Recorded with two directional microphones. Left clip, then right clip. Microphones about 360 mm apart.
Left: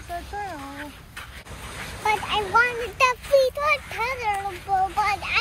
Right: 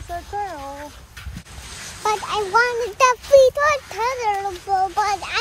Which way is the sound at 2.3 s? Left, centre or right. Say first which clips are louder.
Right 3 dB; centre.